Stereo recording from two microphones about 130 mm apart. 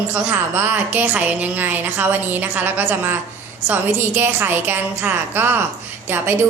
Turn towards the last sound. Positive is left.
turn(degrees=-15)  # may be behind; listen again after turning